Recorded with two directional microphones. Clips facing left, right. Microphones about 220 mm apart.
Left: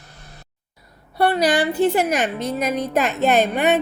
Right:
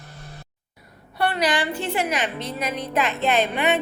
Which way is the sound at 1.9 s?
45° left (ahead or behind).